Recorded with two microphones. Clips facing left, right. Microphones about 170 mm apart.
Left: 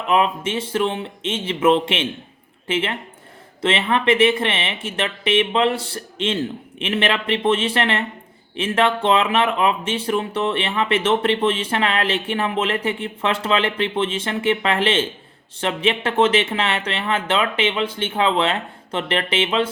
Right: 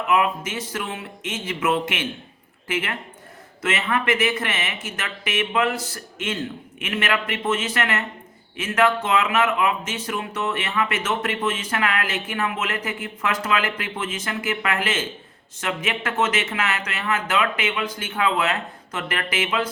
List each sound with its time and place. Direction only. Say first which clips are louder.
0.1 s speech: left 3 dB; 30° left (ahead or behind)